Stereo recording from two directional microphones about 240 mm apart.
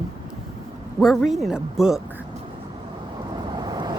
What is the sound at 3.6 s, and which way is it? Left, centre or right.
Vehicle, centre.